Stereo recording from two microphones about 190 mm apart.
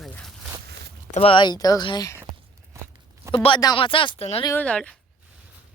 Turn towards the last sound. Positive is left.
turn(degrees=5)  # may be behind; listen again after turning